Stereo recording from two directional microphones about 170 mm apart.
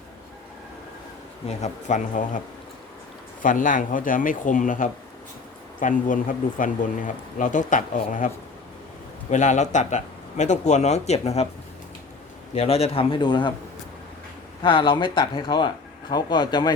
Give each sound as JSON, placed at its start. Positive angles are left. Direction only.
{"t": 1.5, "sound": "speech", "side_deg": 45}
{"t": 3.4, "sound": "speech", "side_deg": 50}
{"t": 9.3, "sound": "speech", "side_deg": 45}
{"t": 12.5, "sound": "a man's voice", "side_deg": 35}
{"t": 14.6, "sound": "speech", "side_deg": 30}